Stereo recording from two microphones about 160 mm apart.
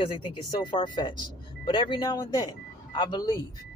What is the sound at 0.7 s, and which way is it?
Speech, 30° left (ahead or behind).